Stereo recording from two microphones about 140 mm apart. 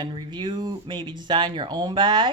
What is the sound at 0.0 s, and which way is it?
Speech, 30° right (ahead or behind).